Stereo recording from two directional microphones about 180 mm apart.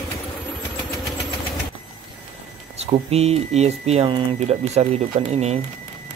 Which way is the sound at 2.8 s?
35° right (ahead or behind).